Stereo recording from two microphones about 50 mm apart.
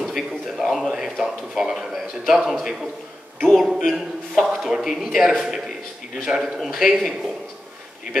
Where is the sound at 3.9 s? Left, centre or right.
Centre.